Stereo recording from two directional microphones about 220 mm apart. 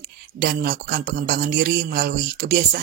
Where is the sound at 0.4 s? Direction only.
40° right (ahead or behind).